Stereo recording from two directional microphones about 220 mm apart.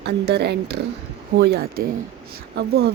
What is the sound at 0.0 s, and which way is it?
Speech, 50° right (ahead or behind).